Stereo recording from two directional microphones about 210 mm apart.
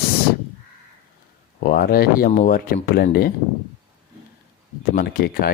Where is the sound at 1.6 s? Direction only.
45° left (ahead or behind).